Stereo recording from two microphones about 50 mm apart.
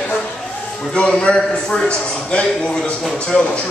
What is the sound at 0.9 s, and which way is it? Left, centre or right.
Speech, left.